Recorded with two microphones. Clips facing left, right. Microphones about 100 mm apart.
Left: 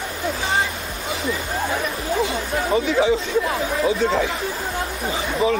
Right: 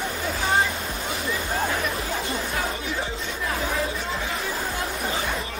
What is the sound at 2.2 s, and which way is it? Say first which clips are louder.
Chatter: left 4 dB; 90° left.